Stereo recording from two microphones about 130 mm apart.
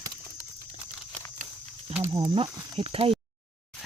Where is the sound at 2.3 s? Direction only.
45° right (ahead or behind).